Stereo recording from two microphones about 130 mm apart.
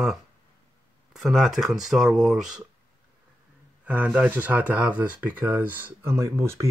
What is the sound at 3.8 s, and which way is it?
Speech, 10° right (ahead or behind).